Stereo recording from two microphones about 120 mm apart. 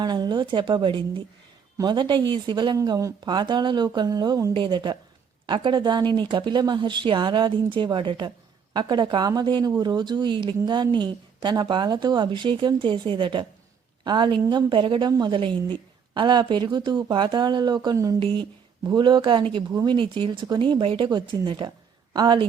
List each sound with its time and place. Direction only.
0.0 s speech: 35° right (ahead or behind)
18.2 s speech: 45° right (ahead or behind)